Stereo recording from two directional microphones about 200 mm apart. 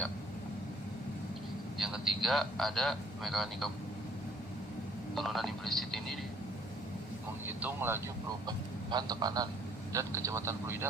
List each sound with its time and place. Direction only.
1.8 s a man's voice: centre (ahead or behind)
5.1 s speech: centre (ahead or behind)
7.6 s speech: 10° right (ahead or behind)